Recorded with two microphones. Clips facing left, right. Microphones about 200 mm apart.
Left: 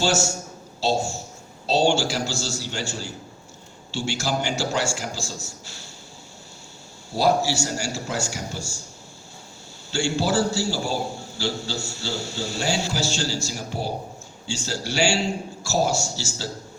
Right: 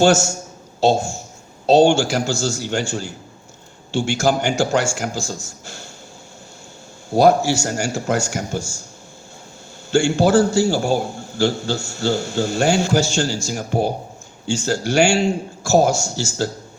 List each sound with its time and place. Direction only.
0.0 s a man's voice: 50° right (ahead or behind)
7.1 s a man's voice: 50° right (ahead or behind)
9.9 s a man's voice: 50° right (ahead or behind)